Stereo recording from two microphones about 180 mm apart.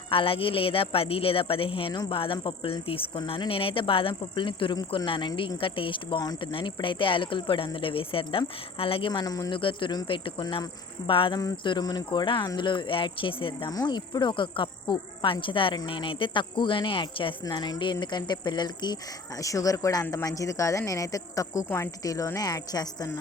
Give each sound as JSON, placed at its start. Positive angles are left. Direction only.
{"t": 0.1, "sound": "speech", "side_deg": 30}